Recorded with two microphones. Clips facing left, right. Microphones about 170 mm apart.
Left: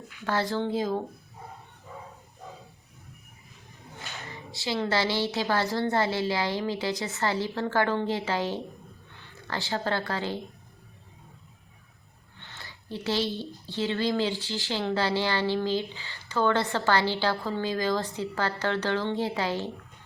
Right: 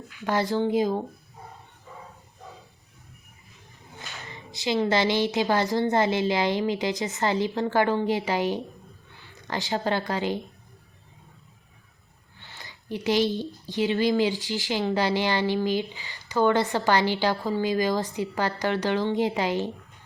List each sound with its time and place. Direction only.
0.2 s speech: 15° right (ahead or behind)
4.5 s speech: 20° right (ahead or behind)
12.4 s a sound: 10° right (ahead or behind)
13.7 s speech: 15° right (ahead or behind)